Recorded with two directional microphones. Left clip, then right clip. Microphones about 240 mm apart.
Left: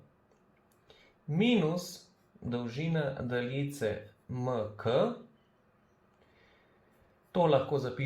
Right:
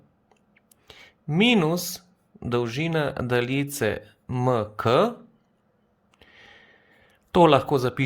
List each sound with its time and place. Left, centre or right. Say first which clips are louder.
0.9 s a sound: right 9 dB; right
2.5 s speech: right 11 dB; right
7.3 s speech: right 10 dB; right